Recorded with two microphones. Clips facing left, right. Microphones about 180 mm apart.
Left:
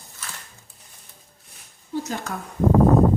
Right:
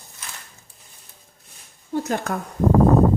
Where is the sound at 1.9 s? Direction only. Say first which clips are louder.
Right 4 dB; 55° right (ahead or behind).